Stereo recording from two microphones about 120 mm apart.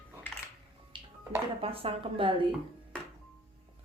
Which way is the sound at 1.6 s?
50° right (ahead or behind).